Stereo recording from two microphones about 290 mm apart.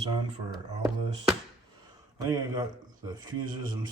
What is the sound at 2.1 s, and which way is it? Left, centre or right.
Speech, centre.